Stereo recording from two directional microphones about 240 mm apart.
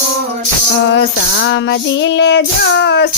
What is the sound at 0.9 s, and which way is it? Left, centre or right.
Female singing, left.